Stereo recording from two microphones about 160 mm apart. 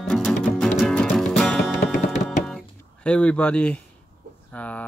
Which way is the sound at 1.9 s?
50° left (ahead or behind).